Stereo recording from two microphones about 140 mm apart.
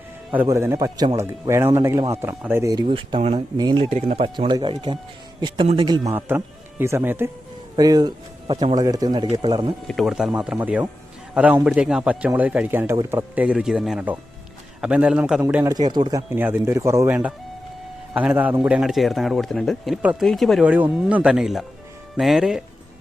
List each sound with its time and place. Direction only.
0.4 s speech: 20° right (ahead or behind)
2.8 s speech: 45° right (ahead or behind)
3.6 s speech: 30° right (ahead or behind)
3.8 s a man's voice: 50° right (ahead or behind); by 6.1 s 30° right (ahead or behind)
6.1 s speech: 15° right (ahead or behind)
7.8 s speech: 30° right (ahead or behind)
9.8 s a man's voice: centre (ahead or behind); by 15.7 s 15° right (ahead or behind)
15.7 s speech: 30° right (ahead or behind)
16.3 s a man's voice: 15° right (ahead or behind); by 20.0 s centre (ahead or behind)
20.0 s speech: 10° right (ahead or behind)
20.2 s a man's voice: centre (ahead or behind)
20.7 s a man's voice: 10° right (ahead or behind)